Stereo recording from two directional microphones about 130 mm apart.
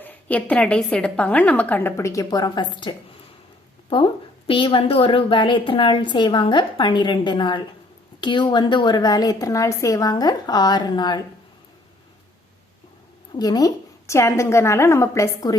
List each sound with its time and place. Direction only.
0.0 s a woman's voice: 10° left (ahead or behind); by 11.2 s 35° left (ahead or behind)
13.3 s a woman's voice: 30° left (ahead or behind)